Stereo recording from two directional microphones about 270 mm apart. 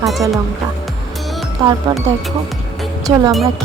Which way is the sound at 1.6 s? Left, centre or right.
Centre.